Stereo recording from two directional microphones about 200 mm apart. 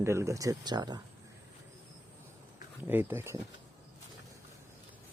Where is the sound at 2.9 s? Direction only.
10° right (ahead or behind).